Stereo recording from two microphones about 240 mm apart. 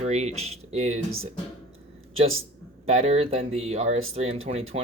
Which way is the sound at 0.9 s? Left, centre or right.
Right.